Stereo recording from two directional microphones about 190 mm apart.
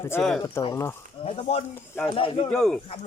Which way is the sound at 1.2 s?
30° left (ahead or behind).